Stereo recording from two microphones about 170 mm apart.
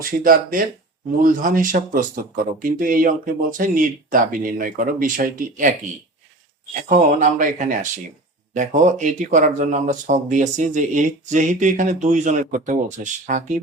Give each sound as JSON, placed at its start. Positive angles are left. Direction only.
{"t": 0.0, "sound": "speech", "side_deg": -55}
{"t": 6.8, "sound": "speech", "side_deg": -50}